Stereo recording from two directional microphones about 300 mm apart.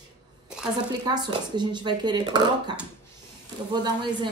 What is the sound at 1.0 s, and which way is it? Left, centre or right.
Speech, centre.